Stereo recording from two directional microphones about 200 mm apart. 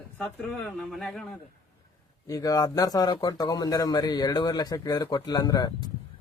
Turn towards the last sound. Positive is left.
turn(degrees=20)  # may be behind; listen again after turning